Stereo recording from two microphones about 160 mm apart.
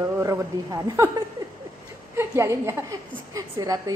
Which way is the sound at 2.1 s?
20° right (ahead or behind).